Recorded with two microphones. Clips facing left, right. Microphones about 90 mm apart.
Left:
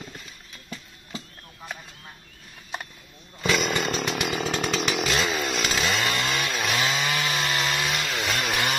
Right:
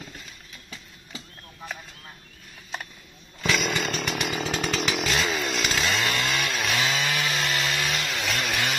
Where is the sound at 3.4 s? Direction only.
15° left (ahead or behind).